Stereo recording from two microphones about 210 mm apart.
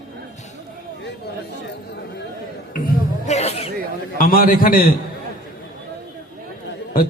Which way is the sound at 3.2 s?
30° left (ahead or behind).